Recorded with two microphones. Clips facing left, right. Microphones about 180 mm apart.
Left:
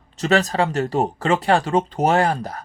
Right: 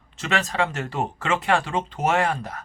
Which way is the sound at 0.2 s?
40° left (ahead or behind).